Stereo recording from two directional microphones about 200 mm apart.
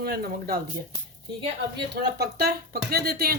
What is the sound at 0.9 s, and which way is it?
Speech, 25° right (ahead or behind).